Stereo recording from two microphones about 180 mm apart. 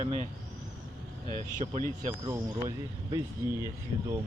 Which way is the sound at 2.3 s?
15° right (ahead or behind).